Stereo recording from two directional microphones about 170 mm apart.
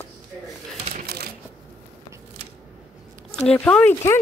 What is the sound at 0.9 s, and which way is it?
Shuffling cards, 65° right (ahead or behind).